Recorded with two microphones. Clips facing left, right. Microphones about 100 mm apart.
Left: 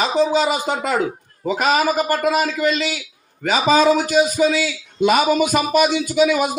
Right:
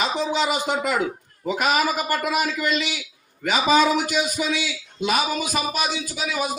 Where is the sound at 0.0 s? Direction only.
35° left (ahead or behind).